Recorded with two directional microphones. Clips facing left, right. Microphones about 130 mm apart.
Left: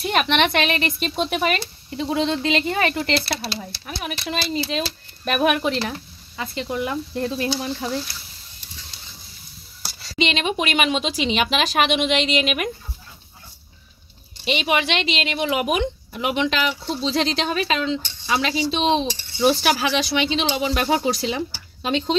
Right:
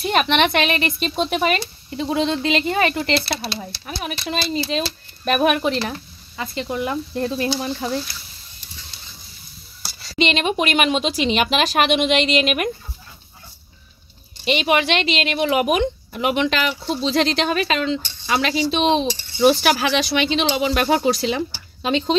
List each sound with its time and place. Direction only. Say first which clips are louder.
0.1 s a woman's voice: right 2 dB; 35° right (ahead or behind)
2.1 s speech: right 1 dB; 20° right (ahead or behind); by 7.7 s 40° right (ahead or behind)
10.1 s speech: right 3 dB; 50° right (ahead or behind)
14.4 s speech: right 3 dB; 55° right (ahead or behind); by 21.4 s 70° right (ahead or behind)
21.8 s speech: right 2 dB; 90° right